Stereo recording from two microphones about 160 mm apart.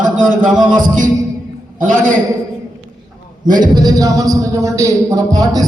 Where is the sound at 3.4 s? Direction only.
25° right (ahead or behind).